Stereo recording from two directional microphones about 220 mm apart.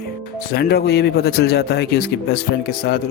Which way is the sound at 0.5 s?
45° left (ahead or behind).